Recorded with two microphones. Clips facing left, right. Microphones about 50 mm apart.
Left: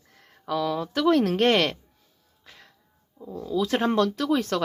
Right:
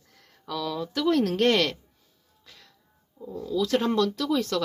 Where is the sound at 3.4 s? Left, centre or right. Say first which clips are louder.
Left 1 dB; left.